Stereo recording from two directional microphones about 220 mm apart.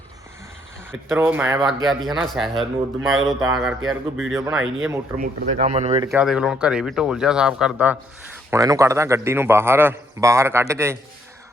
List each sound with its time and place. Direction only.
1.1 s a man's voice: 10° right (ahead or behind)
5.1 s speech: 35° right (ahead or behind)
6.1 s a man's voice: 5° right (ahead or behind)